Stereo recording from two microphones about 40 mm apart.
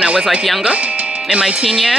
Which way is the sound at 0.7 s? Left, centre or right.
Right.